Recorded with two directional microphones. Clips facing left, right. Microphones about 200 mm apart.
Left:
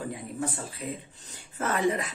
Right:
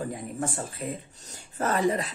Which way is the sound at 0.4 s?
50° right (ahead or behind).